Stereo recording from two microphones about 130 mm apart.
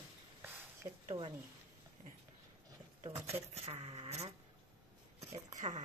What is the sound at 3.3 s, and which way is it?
Speech, 50° right (ahead or behind).